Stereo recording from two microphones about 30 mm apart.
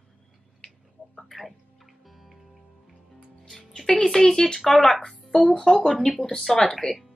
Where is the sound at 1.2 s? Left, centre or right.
Centre.